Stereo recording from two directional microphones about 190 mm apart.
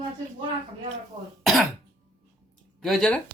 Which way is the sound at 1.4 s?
Centre (ahead or behind).